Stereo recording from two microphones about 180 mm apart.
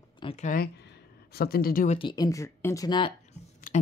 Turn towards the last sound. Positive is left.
turn(degrees=50)  # may be behind; listen again after turning